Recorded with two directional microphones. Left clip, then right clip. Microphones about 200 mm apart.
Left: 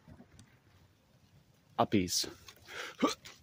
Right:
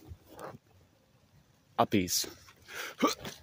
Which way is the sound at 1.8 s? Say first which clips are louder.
Right 2 dB; centre (ahead or behind).